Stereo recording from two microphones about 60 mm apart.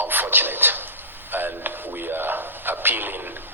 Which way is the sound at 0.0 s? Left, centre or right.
Right.